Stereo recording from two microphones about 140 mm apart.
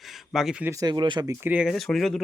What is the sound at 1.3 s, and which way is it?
Speech, 15° right (ahead or behind).